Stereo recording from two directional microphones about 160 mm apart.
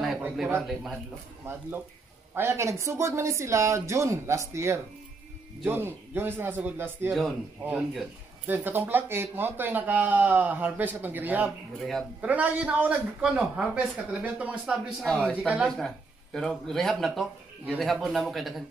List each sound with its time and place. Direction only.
0.0 s a sound: centre (ahead or behind)
0.6 s speech: centre (ahead or behind)
1.4 s a man's voice: 15° right (ahead or behind)
15.0 s speech: 5° left (ahead or behind)
15.3 s a man's voice: 10° right (ahead or behind)